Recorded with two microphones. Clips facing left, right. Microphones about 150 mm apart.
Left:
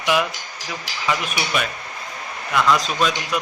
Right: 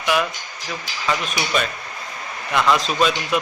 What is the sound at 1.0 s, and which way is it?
Speech, 10° left (ahead or behind).